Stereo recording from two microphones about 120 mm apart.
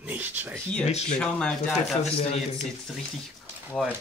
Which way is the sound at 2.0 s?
60° left (ahead or behind).